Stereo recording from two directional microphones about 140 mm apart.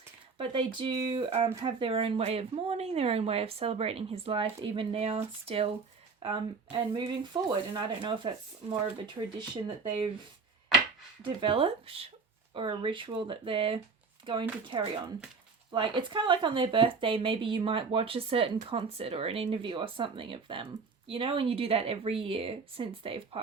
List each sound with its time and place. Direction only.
0.3 s speech: 40° right (ahead or behind)
11.3 s speech: 40° right (ahead or behind)